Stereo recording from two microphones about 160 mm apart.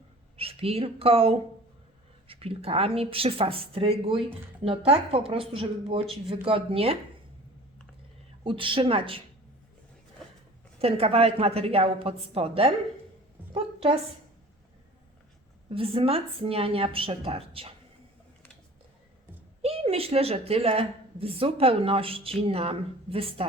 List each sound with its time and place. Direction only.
0.3 s a woman's voice: 35° right (ahead or behind)
8.4 s a woman's voice: 35° right (ahead or behind)
10.8 s a woman's voice: 40° right (ahead or behind)
13.5 s a sound: 35° right (ahead or behind)
15.7 s a woman's voice: 35° right (ahead or behind)
19.6 s a woman's voice: 40° right (ahead or behind)